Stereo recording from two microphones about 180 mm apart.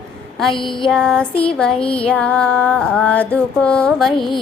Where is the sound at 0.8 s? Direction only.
5° left (ahead or behind).